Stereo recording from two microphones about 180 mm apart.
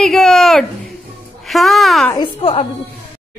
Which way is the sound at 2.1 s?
25° left (ahead or behind).